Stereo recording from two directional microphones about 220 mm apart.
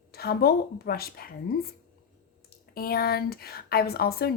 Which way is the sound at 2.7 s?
45° left (ahead or behind).